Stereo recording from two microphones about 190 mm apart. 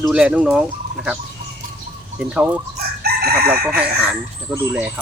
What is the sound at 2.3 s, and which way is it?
Speech, 5° right (ahead or behind).